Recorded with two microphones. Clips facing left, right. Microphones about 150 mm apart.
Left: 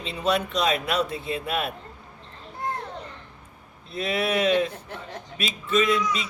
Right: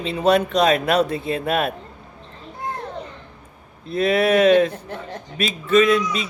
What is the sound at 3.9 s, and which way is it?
Speech, 60° right (ahead or behind).